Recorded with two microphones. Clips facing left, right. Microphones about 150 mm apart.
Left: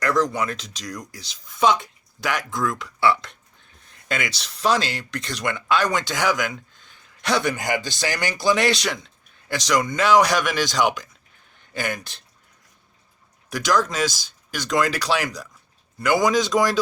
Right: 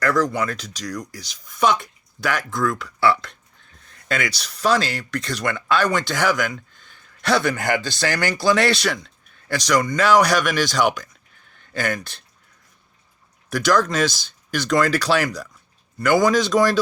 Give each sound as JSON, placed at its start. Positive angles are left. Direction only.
{"t": 0.0, "sound": "speech", "side_deg": 20}
{"t": 7.5, "sound": "speech", "side_deg": -60}
{"t": 7.8, "sound": "speech", "side_deg": 15}
{"t": 13.7, "sound": "speech", "side_deg": 10}